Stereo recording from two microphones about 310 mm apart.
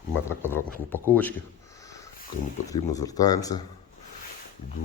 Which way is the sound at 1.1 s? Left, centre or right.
Centre.